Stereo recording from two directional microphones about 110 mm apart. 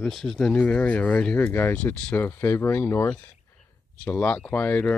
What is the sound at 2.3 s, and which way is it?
Speech, 20° left (ahead or behind).